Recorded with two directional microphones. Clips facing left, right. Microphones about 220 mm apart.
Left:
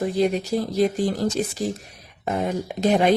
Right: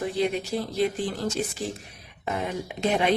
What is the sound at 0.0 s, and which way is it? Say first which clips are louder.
A woman's voice: left 5 dB; 40° left (ahead or behind).